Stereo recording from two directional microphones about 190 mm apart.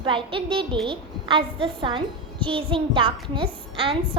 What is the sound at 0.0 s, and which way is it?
A woman's voice, 25° right (ahead or behind).